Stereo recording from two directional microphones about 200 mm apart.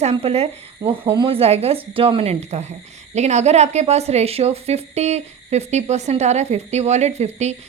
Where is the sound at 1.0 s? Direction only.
20° right (ahead or behind).